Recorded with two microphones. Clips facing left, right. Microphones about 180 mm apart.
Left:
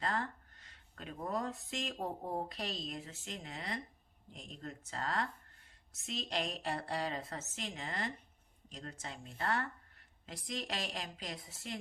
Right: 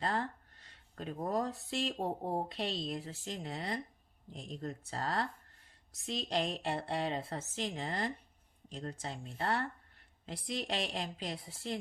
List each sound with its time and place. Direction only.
0.0 s speech: 30° right (ahead or behind)